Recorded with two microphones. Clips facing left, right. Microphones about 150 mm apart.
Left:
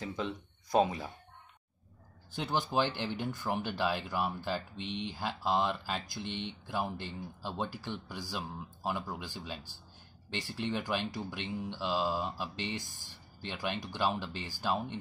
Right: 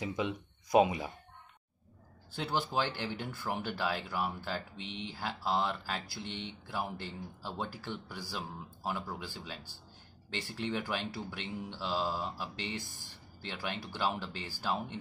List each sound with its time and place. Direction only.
0.0 s speech: 10° right (ahead or behind)
2.3 s speech: 15° left (ahead or behind)